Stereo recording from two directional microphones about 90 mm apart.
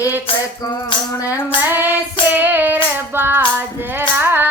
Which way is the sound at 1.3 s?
20° right (ahead or behind).